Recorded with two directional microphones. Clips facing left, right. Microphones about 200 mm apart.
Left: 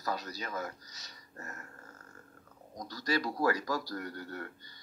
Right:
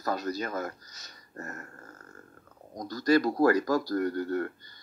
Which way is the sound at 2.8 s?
50° right (ahead or behind).